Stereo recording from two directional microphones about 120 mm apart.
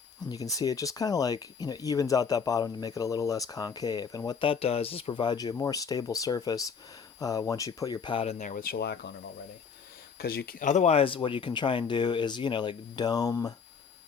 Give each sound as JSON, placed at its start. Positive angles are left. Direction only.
{"t": 0.3, "sound": "speech", "side_deg": 30}
{"t": 4.3, "sound": "speech", "side_deg": 45}
{"t": 8.1, "sound": "speech", "side_deg": 55}
{"t": 10.6, "sound": "speech", "side_deg": 80}